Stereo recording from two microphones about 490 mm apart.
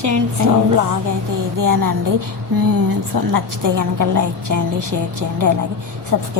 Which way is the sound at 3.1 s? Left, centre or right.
Right.